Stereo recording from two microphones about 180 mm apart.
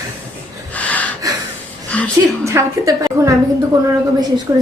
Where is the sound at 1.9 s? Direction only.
5° left (ahead or behind).